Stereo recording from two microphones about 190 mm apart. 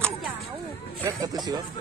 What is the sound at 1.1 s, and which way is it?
Speech, 20° right (ahead or behind).